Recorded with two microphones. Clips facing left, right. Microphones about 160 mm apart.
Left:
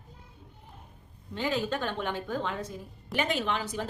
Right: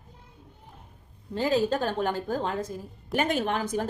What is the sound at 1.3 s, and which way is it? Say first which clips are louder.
A woman's voice: right 6 dB; 40° right (ahead or behind).